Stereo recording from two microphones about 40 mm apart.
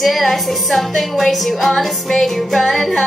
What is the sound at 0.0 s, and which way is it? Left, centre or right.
Music, centre.